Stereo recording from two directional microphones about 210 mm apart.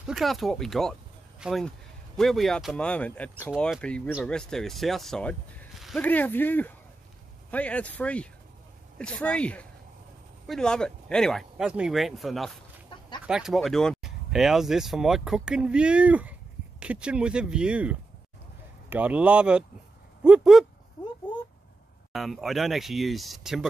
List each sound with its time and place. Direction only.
0.0 s speech: centre (ahead or behind)
12.9 s chicken: 25° left (ahead or behind)
13.3 s speech: centre (ahead or behind)
22.1 s speech: centre (ahead or behind)